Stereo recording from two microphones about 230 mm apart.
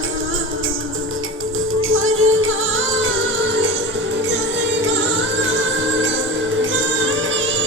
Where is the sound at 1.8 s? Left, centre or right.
Right.